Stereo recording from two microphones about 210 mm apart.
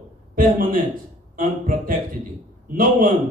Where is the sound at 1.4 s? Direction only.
40° right (ahead or behind).